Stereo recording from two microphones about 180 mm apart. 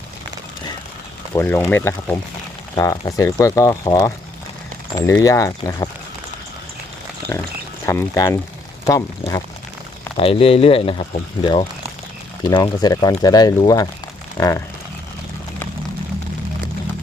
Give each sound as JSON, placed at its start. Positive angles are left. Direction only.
{"t": 1.3, "sound": "speech", "side_deg": 10}
{"t": 7.3, "sound": "speech", "side_deg": 15}
{"t": 10.2, "sound": "speech", "side_deg": 30}